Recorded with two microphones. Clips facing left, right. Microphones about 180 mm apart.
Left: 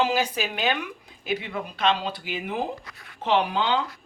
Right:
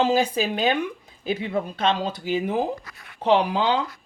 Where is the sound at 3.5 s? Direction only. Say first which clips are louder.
Right 3 dB; 35° right (ahead or behind).